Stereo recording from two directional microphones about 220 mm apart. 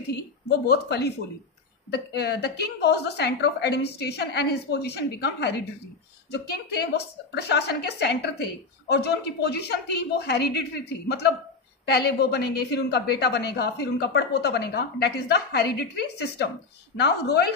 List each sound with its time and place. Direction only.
0.1 s a woman's voice: 50° left (ahead or behind)